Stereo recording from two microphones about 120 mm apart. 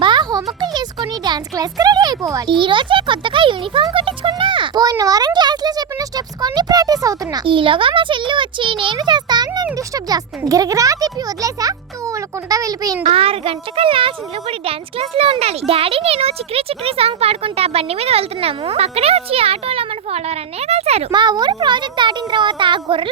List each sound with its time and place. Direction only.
0.0 s a sound: 40° right (ahead or behind)
0.6 s music: 35° right (ahead or behind)
2.5 s a child's voice: 40° right (ahead or behind)
7.4 s a child's voice: 45° right (ahead or behind); by 13.0 s 30° right (ahead or behind)
13.0 s a child's voice: 55° right (ahead or behind)
21.1 s a child's voice: 35° right (ahead or behind)